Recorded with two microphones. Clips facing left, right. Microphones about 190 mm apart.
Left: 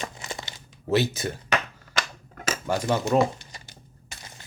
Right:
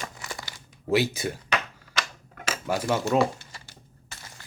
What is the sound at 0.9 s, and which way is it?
Speech, 10° right (ahead or behind).